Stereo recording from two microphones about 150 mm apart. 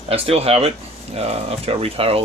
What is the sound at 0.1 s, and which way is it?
Speech, 40° right (ahead or behind).